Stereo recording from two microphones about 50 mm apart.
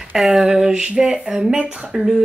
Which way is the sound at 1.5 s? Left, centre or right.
Right.